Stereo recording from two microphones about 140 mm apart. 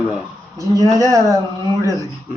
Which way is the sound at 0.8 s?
25° left (ahead or behind).